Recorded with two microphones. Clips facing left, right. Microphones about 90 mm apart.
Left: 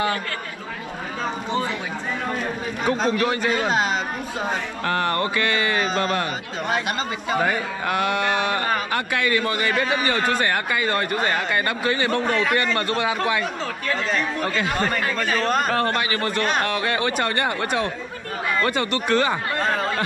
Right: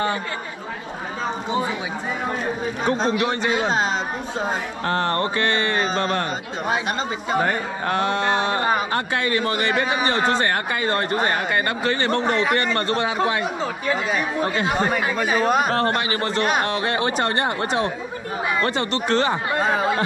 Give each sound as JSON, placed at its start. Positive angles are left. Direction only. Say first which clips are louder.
{"t": 2.8, "sound": "a man's voice", "louder": "even", "side_deg": 0}
{"t": 4.8, "sound": "speech", "louder": "right 1 dB", "side_deg": -25}
{"t": 5.9, "sound": "speech", "louder": "even", "side_deg": 5}
{"t": 7.2, "sound": "a man's voice", "louder": "right 1 dB", "side_deg": 0}
{"t": 8.2, "sound": "speech", "louder": "right 1 dB", "side_deg": -25}
{"t": 8.9, "sound": "speech", "louder": "even", "side_deg": -30}
{"t": 12.2, "sound": "speech", "louder": "right 1 dB", "side_deg": -20}
{"t": 13.8, "sound": "speech", "louder": "even", "side_deg": -10}
{"t": 16.0, "sound": "speech", "louder": "right 1 dB", "side_deg": -25}
{"t": 19.5, "sound": "speech", "louder": "right 3 dB", "side_deg": -10}